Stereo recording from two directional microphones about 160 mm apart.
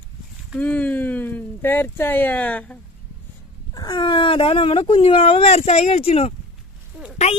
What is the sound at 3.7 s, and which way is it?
Speech, 25° left (ahead or behind).